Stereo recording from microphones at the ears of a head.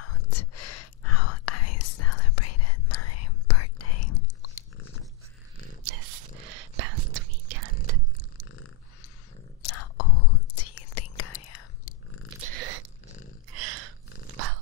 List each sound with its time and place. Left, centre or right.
0.0 s whispering: left
5.9 s whispering: right
9.6 s whispering: left
12.4 s a sound: right